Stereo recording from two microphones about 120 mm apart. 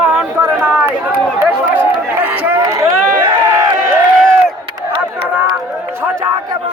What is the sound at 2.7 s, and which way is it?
Run, 30° right (ahead or behind).